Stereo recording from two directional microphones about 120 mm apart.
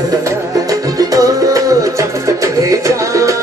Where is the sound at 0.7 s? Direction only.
30° right (ahead or behind).